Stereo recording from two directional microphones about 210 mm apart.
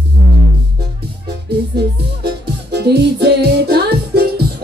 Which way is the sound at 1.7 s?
50° right (ahead or behind).